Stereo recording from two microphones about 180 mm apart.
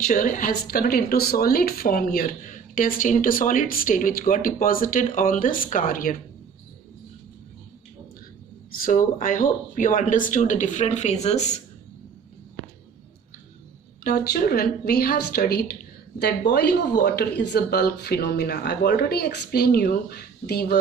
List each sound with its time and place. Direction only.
0.0 s a woman's voice: 50° left (ahead or behind)
8.7 s a woman's voice: 50° left (ahead or behind)
14.0 s speech: 55° left (ahead or behind)